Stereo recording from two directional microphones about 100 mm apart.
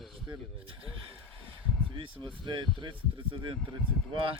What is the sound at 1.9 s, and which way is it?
Speech, 55° right (ahead or behind).